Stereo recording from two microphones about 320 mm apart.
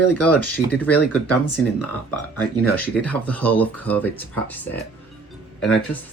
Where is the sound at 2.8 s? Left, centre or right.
Centre.